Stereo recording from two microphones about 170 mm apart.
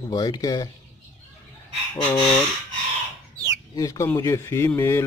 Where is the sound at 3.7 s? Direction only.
20° left (ahead or behind).